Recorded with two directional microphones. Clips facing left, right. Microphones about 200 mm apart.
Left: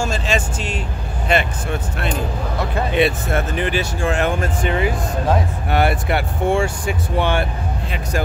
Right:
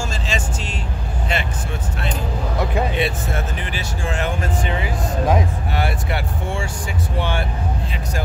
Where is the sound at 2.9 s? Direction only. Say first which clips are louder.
Left 5 dB; 65° left (ahead or behind).